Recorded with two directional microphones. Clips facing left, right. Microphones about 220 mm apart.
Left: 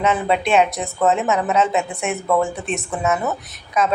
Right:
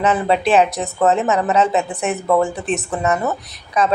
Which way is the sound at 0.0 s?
Centre (ahead or behind).